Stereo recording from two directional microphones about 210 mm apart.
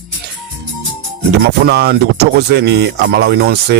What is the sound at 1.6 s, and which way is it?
Speech, 50° right (ahead or behind).